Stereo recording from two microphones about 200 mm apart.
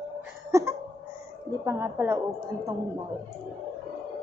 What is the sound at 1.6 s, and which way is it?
Speech, 10° right (ahead or behind).